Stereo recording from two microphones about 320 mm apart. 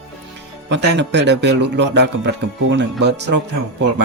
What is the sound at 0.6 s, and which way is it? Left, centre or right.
A man's voice, right.